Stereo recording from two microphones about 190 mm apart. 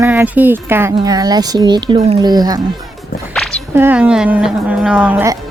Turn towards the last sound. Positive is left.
turn(degrees=-10)  # may be behind; listen again after turning